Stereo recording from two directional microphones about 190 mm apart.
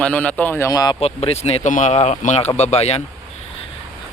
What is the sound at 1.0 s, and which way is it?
Speech, 35° left (ahead or behind).